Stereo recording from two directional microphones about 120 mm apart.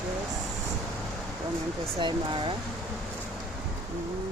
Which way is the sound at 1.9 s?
40° right (ahead or behind).